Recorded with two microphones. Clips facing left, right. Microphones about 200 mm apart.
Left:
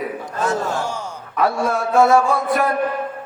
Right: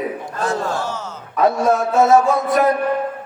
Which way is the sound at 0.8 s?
15° left (ahead or behind).